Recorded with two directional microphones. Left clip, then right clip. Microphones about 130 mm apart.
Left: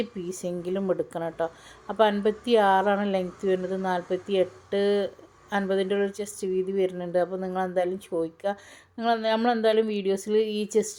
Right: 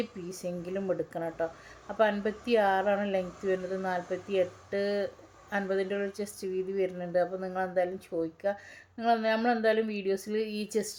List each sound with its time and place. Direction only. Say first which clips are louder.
0.3 s speech: left 6 dB; 30° left (ahead or behind)